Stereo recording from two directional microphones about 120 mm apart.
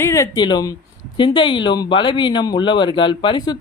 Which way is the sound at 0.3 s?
35° left (ahead or behind).